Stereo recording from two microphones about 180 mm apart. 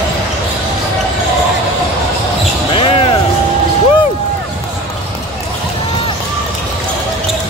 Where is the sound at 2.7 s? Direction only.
30° left (ahead or behind).